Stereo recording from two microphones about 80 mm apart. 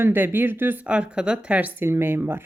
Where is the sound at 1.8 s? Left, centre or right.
Right.